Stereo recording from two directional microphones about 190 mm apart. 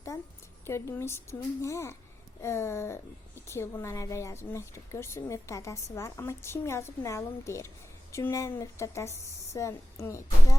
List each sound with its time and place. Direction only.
0.6 s a woman's voice: 15° left (ahead or behind)